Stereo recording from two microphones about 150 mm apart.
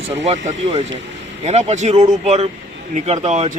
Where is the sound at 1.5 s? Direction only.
45° right (ahead or behind).